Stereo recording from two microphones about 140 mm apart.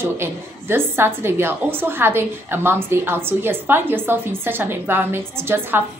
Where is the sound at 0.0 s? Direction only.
15° right (ahead or behind).